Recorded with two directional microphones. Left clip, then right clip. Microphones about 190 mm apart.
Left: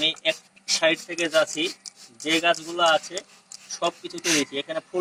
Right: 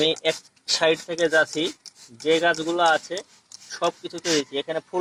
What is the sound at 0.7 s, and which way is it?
Speech, 50° right (ahead or behind).